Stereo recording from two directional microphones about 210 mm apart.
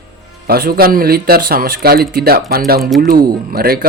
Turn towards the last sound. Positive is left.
turn(degrees=-45)  # may be behind; listen again after turning